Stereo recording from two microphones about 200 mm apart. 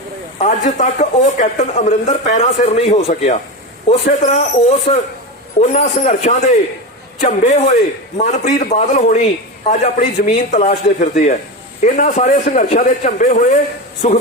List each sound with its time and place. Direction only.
0.3 s a man's voice: 35° left (ahead or behind)